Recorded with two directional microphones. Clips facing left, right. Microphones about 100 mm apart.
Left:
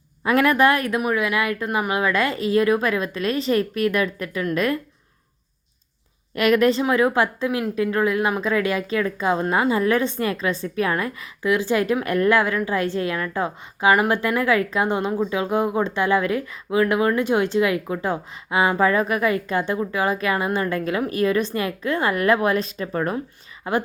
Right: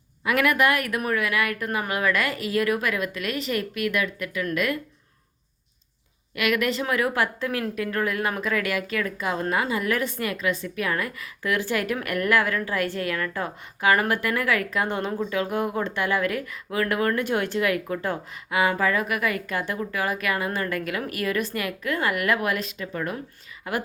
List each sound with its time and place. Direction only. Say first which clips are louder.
0.3 s a woman's voice: left 4 dB; 30° left (ahead or behind)
6.3 s a woman's voice: left 7 dB; 35° left (ahead or behind)
23.6 s a woman's voice: left 6 dB; 25° left (ahead or behind)